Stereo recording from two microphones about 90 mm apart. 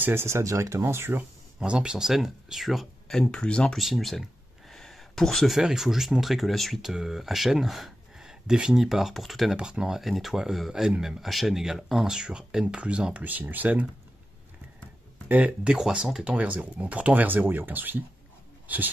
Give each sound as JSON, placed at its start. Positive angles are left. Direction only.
{"t": 0.0, "sound": "speech", "side_deg": -25}
{"t": 1.6, "sound": "speech", "side_deg": -10}
{"t": 15.2, "sound": "speech", "side_deg": -15}